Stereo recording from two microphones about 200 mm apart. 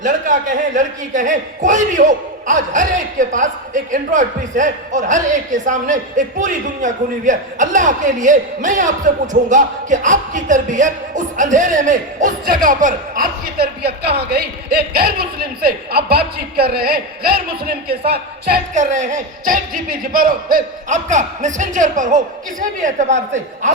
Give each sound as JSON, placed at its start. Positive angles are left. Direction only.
{"t": 0.8, "sound": "a man's voice", "side_deg": -40}
{"t": 18.7, "sound": "a man's voice", "side_deg": -40}